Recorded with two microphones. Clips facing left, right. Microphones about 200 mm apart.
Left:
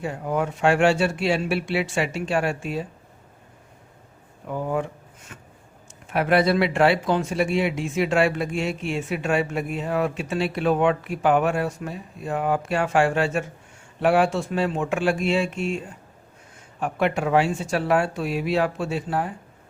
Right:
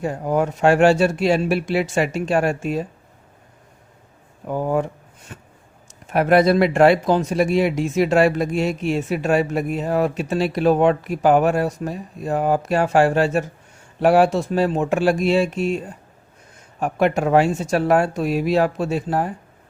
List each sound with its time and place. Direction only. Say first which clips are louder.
0.0 s speech: right 5 dB; 40° right (ahead or behind)
4.4 s speech: right 5 dB; 40° right (ahead or behind)
5.3 s a sound: right 5 dB; 35° right (ahead or behind)
6.1 s speech: right 5 dB; 45° right (ahead or behind)
16.8 s speech: right 4 dB; 40° right (ahead or behind)